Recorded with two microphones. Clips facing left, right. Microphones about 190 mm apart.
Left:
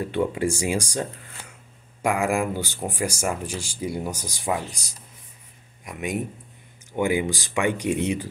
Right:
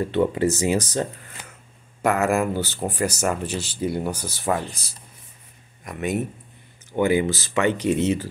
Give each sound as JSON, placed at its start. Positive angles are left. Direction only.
{"t": 0.3, "sound": "speech", "side_deg": 10}